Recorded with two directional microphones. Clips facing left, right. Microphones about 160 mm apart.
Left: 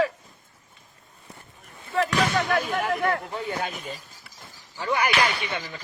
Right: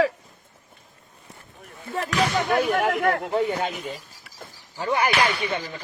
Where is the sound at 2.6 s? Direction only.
70° right (ahead or behind).